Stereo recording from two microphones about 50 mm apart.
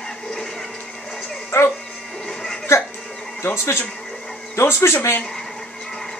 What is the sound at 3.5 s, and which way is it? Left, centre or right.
Speech, left.